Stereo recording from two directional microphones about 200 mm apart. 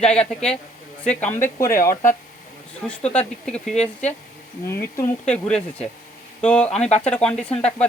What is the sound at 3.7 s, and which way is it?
Speech, 35° left (ahead or behind).